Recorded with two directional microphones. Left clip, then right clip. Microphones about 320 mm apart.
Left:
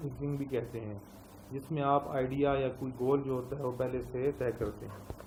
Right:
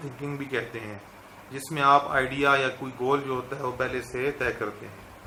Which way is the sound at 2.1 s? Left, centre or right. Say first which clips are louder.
Right 8 dB; centre.